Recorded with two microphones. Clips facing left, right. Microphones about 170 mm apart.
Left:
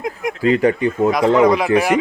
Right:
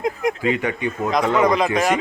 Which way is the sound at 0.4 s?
35° left (ahead or behind).